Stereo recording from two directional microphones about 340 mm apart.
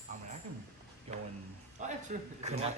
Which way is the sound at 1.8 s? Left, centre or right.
Centre.